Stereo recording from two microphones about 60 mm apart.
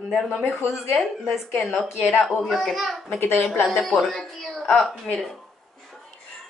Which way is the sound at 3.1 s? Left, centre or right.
Left.